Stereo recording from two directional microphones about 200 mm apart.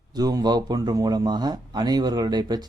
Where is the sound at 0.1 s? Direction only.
20° right (ahead or behind).